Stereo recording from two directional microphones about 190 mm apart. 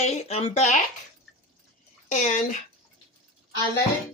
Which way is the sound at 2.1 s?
40° left (ahead or behind).